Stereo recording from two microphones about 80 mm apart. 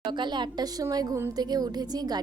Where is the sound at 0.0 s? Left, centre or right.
Right.